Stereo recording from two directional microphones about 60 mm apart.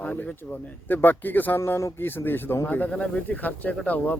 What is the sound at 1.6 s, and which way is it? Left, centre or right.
Speech, left.